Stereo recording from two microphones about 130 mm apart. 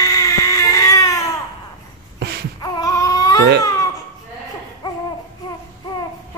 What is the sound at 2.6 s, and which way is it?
Baby cry, 25° left (ahead or behind).